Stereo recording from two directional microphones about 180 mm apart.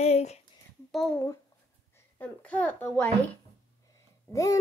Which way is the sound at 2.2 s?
5° left (ahead or behind).